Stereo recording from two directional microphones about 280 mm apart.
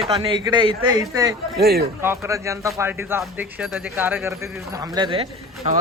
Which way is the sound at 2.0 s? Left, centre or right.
Centre.